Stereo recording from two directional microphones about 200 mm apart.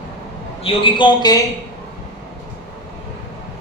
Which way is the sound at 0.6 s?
25° left (ahead or behind).